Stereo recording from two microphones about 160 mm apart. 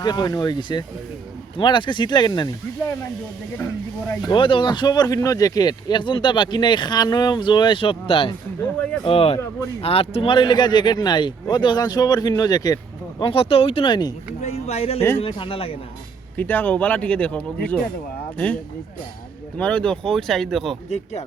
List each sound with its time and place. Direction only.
0.0 s speech: 25° left (ahead or behind)
3.6 s speech: 15° left (ahead or behind)
4.3 s speech: 30° left (ahead or behind)
14.4 s a sound: 40° left (ahead or behind)
15.2 s speech: 35° left (ahead or behind)
16.4 s speech: 10° left (ahead or behind)
19.5 s speech: 5° left (ahead or behind)
20.9 s speech: 45° left (ahead or behind)